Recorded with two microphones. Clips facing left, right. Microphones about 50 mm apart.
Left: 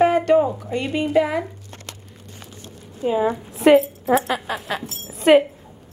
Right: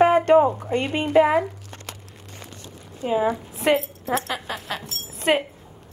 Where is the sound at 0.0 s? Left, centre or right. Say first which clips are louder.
Right 1 dB; right.